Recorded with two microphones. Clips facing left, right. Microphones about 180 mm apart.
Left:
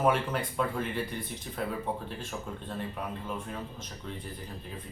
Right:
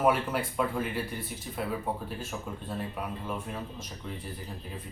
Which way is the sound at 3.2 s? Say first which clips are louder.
Right 1 dB; 5° right (ahead or behind).